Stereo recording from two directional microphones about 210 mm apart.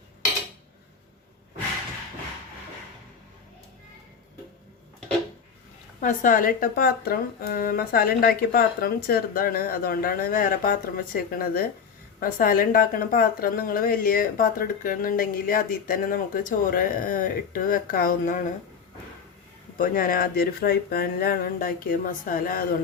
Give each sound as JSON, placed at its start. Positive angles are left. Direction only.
{"t": 6.0, "sound": "speech", "side_deg": 40}
{"t": 19.7, "sound": "speech", "side_deg": 40}